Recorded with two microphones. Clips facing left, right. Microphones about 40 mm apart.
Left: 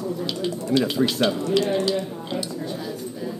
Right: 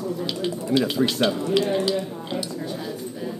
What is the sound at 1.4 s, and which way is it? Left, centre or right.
Speech, centre.